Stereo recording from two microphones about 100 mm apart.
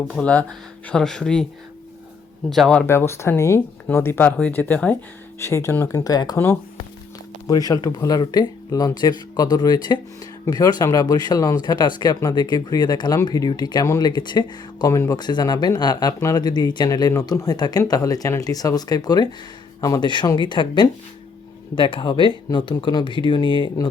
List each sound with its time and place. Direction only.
0.1 s speech: 10° left (ahead or behind)
2.5 s speech: 5° left (ahead or behind)
2.8 s speech: 25° left (ahead or behind)
5.4 s speech: 30° left (ahead or behind)
7.4 s speech: 40° left (ahead or behind)
13.8 s speech: 35° left (ahead or behind)
14.1 s speech: 50° left (ahead or behind)
15.2 s speech: 45° left (ahead or behind)